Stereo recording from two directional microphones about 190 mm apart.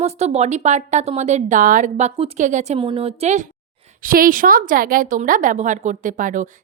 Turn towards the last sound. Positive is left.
turn(degrees=-45)  # may be behind; listen again after turning